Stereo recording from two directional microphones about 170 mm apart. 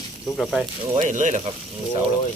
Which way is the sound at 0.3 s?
Centre (ahead or behind).